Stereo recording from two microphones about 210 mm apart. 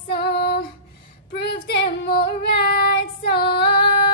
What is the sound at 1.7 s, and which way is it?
Female singing, 50° left (ahead or behind).